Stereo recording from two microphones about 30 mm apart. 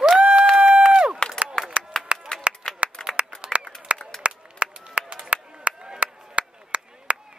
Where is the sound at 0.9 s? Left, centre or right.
Right.